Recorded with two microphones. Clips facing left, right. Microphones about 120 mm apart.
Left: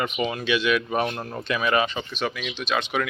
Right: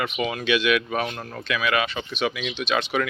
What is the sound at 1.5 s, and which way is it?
Speech, 35° left (ahead or behind).